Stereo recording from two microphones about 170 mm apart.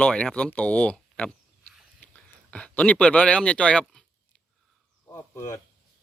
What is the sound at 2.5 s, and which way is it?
Speech, 5° left (ahead or behind).